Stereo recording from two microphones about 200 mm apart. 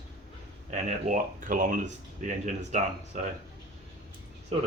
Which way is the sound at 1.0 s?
40° right (ahead or behind).